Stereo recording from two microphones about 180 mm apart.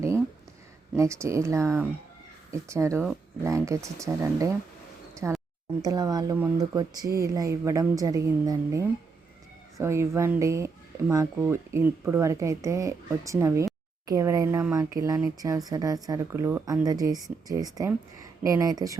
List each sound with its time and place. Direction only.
0.9 s speech: 15° right (ahead or behind)